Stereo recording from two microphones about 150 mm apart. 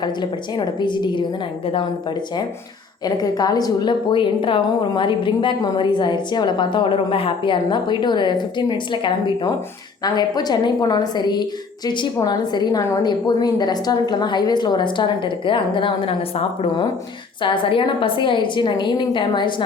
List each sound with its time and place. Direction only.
0.0 s a woman's voice: 30° left (ahead or behind)
3.0 s a woman's voice: 25° left (ahead or behind)